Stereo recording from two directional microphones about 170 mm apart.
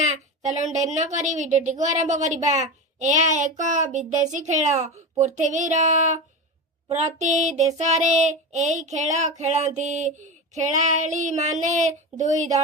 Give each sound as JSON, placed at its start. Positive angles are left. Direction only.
{"t": 0.0, "sound": "a child's voice", "side_deg": -40}